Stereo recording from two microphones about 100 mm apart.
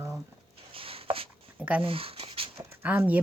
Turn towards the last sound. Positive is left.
turn(degrees=-15)  # may be behind; listen again after turning